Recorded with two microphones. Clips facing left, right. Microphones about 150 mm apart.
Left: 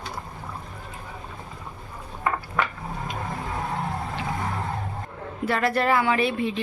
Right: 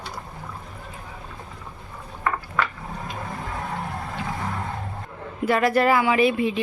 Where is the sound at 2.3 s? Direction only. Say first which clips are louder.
Even; 20° left (ahead or behind).